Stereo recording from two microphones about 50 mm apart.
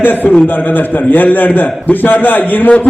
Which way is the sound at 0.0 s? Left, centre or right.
Left.